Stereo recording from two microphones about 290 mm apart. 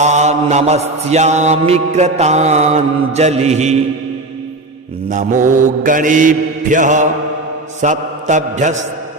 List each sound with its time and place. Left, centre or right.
0.0 s mantra: right
5.0 s mantra: right